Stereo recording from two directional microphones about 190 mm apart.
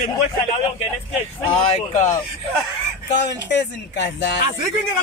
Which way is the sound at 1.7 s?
40° left (ahead or behind).